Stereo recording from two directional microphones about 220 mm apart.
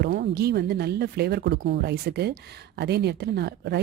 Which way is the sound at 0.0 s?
50° right (ahead or behind).